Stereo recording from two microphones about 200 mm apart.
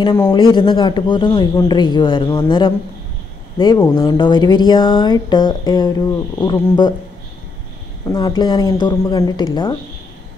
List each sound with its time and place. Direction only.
0.0 s speech: 20° left (ahead or behind)
8.1 s speech: 20° left (ahead or behind)